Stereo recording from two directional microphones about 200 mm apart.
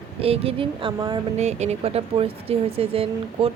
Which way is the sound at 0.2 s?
30° right (ahead or behind).